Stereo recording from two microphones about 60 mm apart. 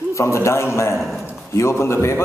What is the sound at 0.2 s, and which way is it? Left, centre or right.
A man's voice, left.